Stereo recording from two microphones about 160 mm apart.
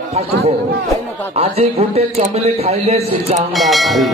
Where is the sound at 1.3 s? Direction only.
40° right (ahead or behind).